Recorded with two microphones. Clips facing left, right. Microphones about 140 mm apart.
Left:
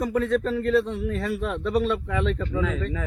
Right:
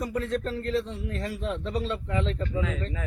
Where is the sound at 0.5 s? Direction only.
60° left (ahead or behind).